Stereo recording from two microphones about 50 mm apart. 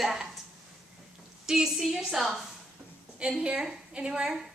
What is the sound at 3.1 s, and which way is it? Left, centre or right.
A woman's voice, centre.